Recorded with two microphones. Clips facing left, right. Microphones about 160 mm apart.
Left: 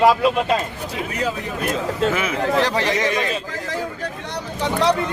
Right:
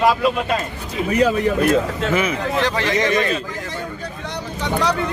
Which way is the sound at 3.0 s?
10° left (ahead or behind).